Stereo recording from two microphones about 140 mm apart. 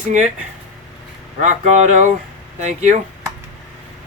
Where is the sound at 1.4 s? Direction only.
55° right (ahead or behind).